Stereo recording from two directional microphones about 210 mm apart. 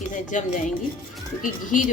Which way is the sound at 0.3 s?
35° left (ahead or behind).